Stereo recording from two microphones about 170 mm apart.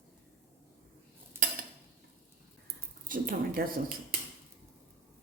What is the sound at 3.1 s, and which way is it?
Speech, 55° right (ahead or behind).